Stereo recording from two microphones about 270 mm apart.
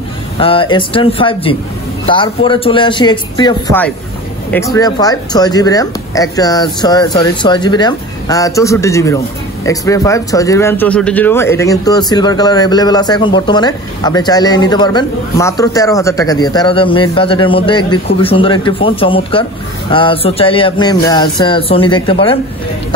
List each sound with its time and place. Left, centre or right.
0.4 s speech: centre